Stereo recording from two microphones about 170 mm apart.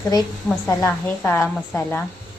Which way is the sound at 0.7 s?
10° left (ahead or behind).